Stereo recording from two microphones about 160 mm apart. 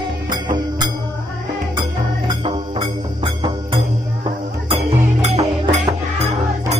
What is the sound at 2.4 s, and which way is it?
Music, 35° right (ahead or behind).